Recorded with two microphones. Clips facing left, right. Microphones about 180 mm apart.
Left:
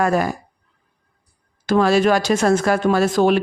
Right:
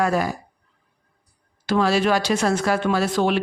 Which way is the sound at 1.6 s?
50° left (ahead or behind).